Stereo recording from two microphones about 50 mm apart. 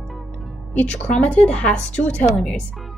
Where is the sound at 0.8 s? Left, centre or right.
Left.